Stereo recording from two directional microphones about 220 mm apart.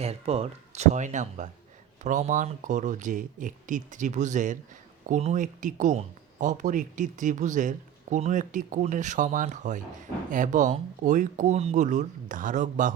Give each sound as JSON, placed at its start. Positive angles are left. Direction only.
{"t": 0.0, "sound": "speech", "side_deg": -30}